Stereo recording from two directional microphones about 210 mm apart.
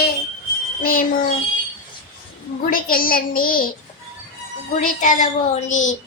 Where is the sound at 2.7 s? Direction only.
40° left (ahead or behind).